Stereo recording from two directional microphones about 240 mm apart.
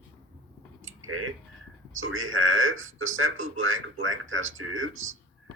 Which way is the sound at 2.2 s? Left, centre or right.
Right.